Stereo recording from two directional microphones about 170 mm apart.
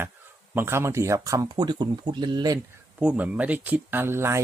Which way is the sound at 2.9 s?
10° right (ahead or behind).